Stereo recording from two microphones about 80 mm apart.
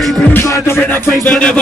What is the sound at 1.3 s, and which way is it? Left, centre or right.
Music, centre.